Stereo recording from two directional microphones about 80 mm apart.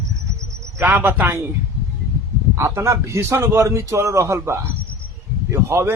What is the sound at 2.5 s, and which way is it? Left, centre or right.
A man's voice, right.